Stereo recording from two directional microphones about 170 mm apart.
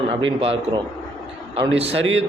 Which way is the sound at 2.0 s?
90° right.